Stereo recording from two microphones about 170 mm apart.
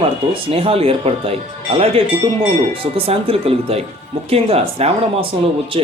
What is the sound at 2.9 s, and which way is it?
Speech, 35° right (ahead or behind).